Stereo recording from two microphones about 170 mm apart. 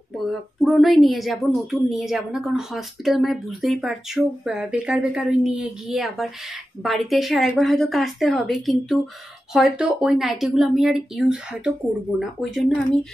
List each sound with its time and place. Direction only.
0.3 s speech: centre (ahead or behind)